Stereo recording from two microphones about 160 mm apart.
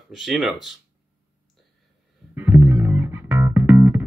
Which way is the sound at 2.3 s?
15° right (ahead or behind).